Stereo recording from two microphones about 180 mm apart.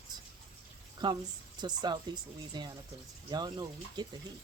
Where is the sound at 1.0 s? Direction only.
25° right (ahead or behind).